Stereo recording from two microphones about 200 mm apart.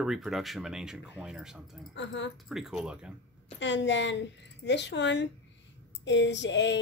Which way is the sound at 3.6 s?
65° left (ahead or behind).